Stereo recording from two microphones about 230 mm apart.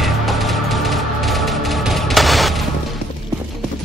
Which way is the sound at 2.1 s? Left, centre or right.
Centre.